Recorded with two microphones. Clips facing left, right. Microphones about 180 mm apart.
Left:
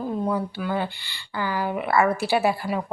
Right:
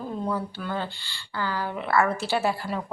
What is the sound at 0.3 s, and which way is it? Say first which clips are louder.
A woman's voice: left 4 dB; 15° left (ahead or behind).